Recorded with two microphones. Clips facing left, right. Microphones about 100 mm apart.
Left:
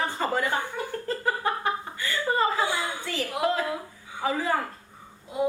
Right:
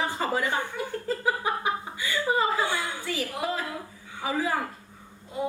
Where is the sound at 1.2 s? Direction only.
10° right (ahead or behind).